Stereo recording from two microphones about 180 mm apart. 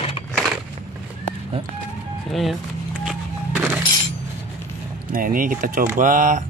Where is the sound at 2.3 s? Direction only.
Centre (ahead or behind).